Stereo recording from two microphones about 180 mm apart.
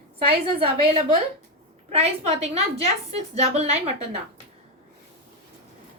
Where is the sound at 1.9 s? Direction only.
35° right (ahead or behind).